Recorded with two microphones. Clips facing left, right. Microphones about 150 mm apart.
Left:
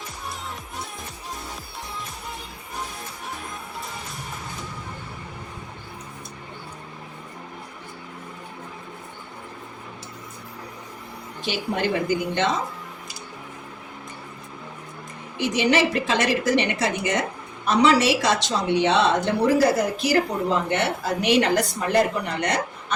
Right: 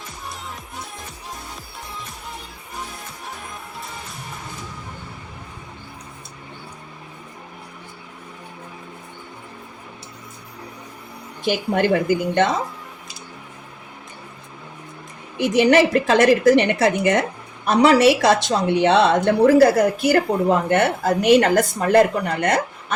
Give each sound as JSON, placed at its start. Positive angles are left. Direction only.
{"t": 11.4, "sound": "a woman's voice", "side_deg": -55}
{"t": 15.4, "sound": "a woman's voice", "side_deg": -55}